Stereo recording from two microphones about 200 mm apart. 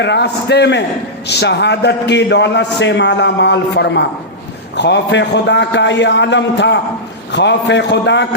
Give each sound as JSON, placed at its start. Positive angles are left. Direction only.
{"t": 0.0, "sound": "a man's voice", "side_deg": 60}